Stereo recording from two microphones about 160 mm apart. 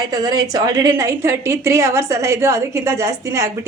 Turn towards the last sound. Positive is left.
turn(degrees=-20)  # may be behind; listen again after turning